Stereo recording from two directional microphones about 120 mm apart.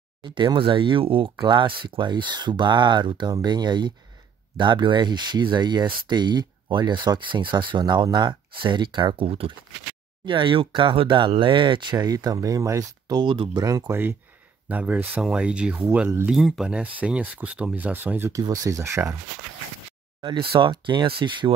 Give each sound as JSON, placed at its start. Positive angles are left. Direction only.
{"t": 0.2, "sound": "speech", "side_deg": -40}
{"t": 13.2, "sound": "speech", "side_deg": -40}
{"t": 13.6, "sound": "speech", "side_deg": -30}
{"t": 16.3, "sound": "speech", "side_deg": 0}
{"t": 18.3, "sound": "speech", "side_deg": -30}
{"t": 20.2, "sound": "speech", "side_deg": -40}